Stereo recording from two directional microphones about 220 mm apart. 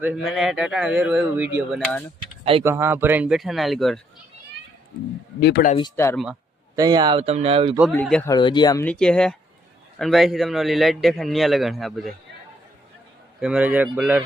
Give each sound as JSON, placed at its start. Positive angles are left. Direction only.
{"t": 0.0, "sound": "a man's voice", "side_deg": -5}
{"t": 2.4, "sound": "speech", "side_deg": -25}
{"t": 2.6, "sound": "a man's voice", "side_deg": -10}
{"t": 5.4, "sound": "speech", "side_deg": 50}
{"t": 5.7, "sound": "speech", "side_deg": 15}
{"t": 6.7, "sound": "speech", "side_deg": -20}
{"t": 7.8, "sound": "a man's voice", "side_deg": 0}
{"t": 8.3, "sound": "speech", "side_deg": 20}
{"t": 8.8, "sound": "a man's voice", "side_deg": 5}
{"t": 13.4, "sound": "speech", "side_deg": -5}